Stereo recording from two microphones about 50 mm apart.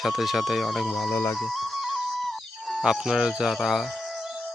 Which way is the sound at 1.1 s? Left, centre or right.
Left.